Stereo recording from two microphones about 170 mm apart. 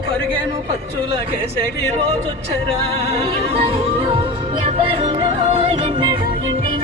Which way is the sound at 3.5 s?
35° right (ahead or behind).